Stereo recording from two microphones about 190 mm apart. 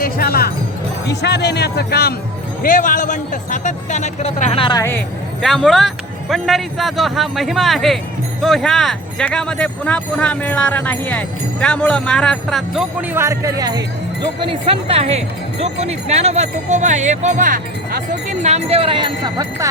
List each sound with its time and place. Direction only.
0.0 s speech: 55° left (ahead or behind)
2.6 s speech: 45° left (ahead or behind); by 4.8 s 30° left (ahead or behind)
4.8 s speech: 10° left (ahead or behind)
13.1 s speech: 15° right (ahead or behind)